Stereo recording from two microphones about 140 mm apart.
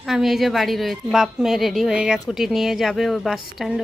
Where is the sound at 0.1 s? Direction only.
Centre (ahead or behind).